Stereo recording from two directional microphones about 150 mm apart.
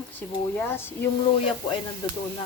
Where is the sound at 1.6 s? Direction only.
35° left (ahead or behind).